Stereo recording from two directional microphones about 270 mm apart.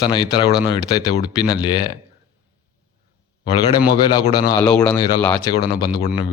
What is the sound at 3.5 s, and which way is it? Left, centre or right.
Speech, centre.